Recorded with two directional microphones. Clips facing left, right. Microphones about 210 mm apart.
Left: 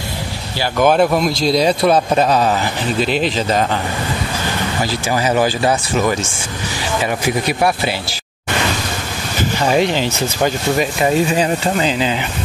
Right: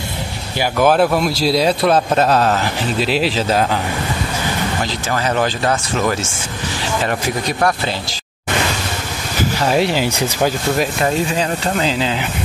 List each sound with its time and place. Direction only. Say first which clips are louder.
0.7 s a man's voice: left 1 dB; 5° right (ahead or behind)
4.8 s a man's voice: left 2 dB; 10° left (ahead or behind)
9.4 s speech: left 1 dB; 5° right (ahead or behind)
10.4 s a man's voice: left 1 dB; centre (ahead or behind)